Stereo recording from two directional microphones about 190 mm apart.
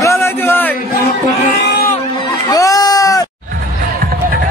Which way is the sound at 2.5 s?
20° left (ahead or behind).